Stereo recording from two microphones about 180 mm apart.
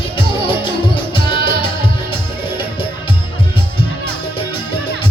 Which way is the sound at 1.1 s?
30° left (ahead or behind).